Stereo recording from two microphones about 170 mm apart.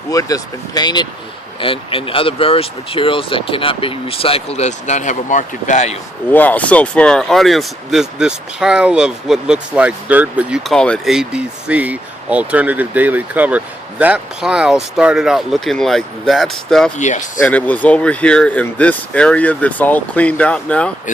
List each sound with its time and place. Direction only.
0.1 s speech: 20° left (ahead or behind); by 6.0 s 45° left (ahead or behind)
6.3 s speech: 10° left (ahead or behind)
17.0 s speech: 45° left (ahead or behind)
17.4 s speech: 10° left (ahead or behind)